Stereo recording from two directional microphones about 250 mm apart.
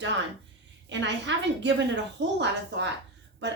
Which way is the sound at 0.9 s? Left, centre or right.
Right.